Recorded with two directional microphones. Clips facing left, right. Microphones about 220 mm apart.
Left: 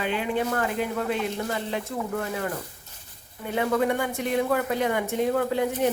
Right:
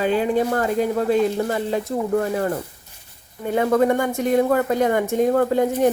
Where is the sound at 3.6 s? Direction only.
45° right (ahead or behind).